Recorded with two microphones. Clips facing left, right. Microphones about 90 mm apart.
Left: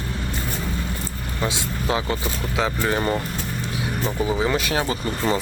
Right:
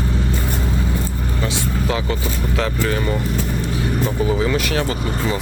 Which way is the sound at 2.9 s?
35° left (ahead or behind).